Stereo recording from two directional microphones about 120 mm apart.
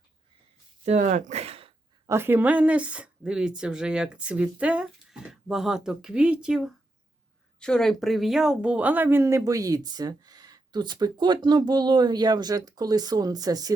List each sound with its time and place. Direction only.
0.9 s speech: 85° right; by 1.7 s 55° right (ahead or behind)
2.0 s speech: 20° right (ahead or behind)
7.6 s speech: 5° left (ahead or behind); by 13.7 s 30° right (ahead or behind)